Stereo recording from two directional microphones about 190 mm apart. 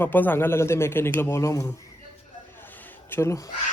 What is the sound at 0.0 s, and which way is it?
Speech, 10° left (ahead or behind).